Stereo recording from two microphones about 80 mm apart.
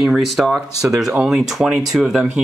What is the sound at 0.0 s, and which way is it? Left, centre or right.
Speech, centre.